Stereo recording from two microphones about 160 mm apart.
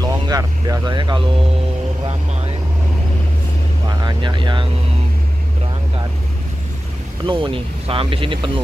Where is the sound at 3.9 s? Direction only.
30° right (ahead or behind).